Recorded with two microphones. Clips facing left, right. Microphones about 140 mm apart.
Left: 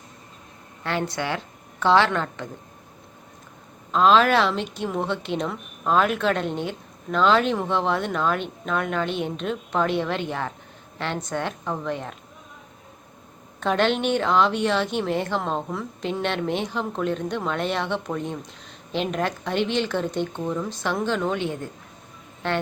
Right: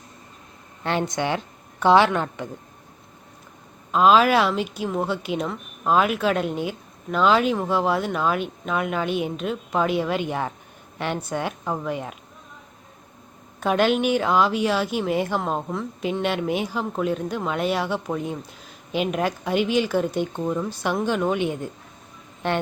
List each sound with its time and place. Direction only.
0.9 s a woman's voice: 20° right (ahead or behind)
3.9 s a woman's voice: 10° right (ahead or behind)
13.6 s a woman's voice: 10° right (ahead or behind)